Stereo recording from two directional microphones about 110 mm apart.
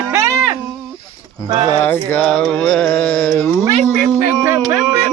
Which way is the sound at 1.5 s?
45° right (ahead or behind).